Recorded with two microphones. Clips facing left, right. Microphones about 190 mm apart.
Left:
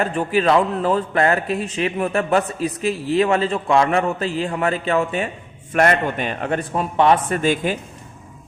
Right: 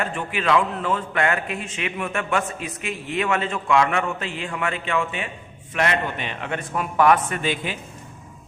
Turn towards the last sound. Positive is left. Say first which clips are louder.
# left 6 dB
turn(degrees=40)  # may be behind; listen again after turning